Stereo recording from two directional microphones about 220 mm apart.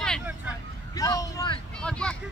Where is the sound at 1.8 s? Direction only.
5° left (ahead or behind).